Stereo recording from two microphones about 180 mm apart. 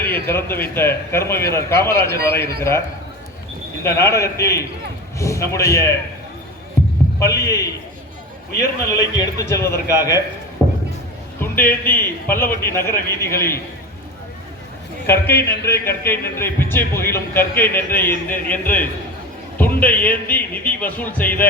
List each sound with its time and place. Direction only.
0.1 s a man's voice: 10° left (ahead or behind)
3.8 s a man's voice: 15° left (ahead or behind)
7.2 s a man's voice: 15° left (ahead or behind)
9.6 s a man's voice: 60° left (ahead or behind)
9.9 s a man's voice: 20° left (ahead or behind)
10.6 s a sound: 10° left (ahead or behind)
11.3 s a man's voice: 10° left (ahead or behind)
15.0 s a man's voice: 10° left (ahead or behind)
18.3 s a man's voice: 50° left (ahead or behind)
18.6 s a man's voice: 10° left (ahead or behind)